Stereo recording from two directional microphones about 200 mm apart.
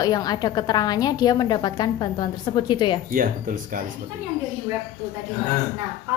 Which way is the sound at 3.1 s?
45° right (ahead or behind).